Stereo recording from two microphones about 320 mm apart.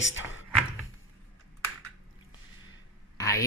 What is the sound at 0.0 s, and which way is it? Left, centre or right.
Speech, left.